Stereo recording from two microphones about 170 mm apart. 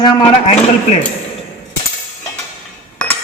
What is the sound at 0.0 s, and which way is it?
Speech, 25° left (ahead or behind).